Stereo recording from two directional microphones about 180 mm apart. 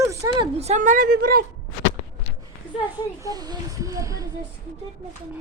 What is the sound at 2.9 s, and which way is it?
Speech, 15° right (ahead or behind).